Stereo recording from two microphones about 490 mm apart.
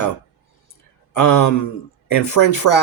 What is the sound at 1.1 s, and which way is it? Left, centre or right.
Speech, left.